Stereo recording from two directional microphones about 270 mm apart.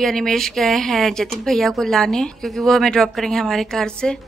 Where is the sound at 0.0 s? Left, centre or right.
Centre.